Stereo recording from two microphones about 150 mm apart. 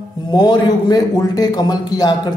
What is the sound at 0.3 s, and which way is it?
A man's voice, 30° left (ahead or behind).